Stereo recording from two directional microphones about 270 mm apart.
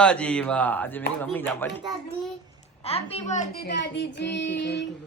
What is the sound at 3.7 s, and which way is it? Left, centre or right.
Child singing, left.